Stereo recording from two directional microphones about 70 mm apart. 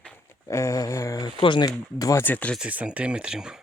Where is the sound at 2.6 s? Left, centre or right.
Centre.